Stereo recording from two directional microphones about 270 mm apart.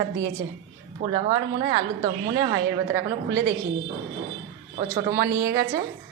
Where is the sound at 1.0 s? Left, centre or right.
Centre.